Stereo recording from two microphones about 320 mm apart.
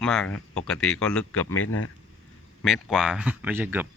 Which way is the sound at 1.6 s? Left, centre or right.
Left.